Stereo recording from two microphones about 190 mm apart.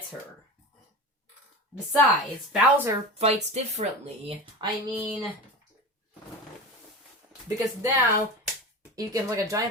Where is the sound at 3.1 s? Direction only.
35° right (ahead or behind).